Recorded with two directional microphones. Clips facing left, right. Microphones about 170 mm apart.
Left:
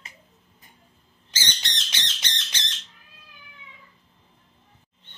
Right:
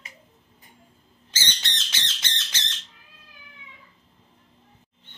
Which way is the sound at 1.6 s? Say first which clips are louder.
Even; 15° left (ahead or behind).